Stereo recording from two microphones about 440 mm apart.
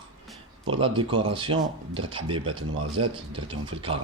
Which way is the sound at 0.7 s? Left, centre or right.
Centre.